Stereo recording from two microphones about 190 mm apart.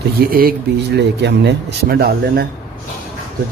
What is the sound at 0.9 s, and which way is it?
Speech, 65° right (ahead or behind).